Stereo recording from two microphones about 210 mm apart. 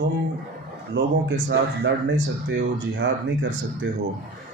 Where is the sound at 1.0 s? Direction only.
55° right (ahead or behind).